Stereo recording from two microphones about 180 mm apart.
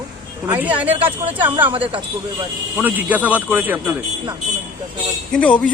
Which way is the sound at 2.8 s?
10° right (ahead or behind).